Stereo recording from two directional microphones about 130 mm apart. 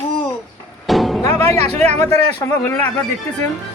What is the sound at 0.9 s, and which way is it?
Music, centre (ahead or behind).